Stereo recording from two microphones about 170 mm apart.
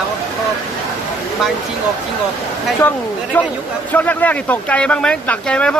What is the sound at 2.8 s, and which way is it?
Speech, 10° left (ahead or behind).